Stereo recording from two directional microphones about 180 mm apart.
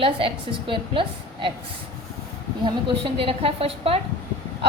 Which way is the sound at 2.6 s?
30° right (ahead or behind).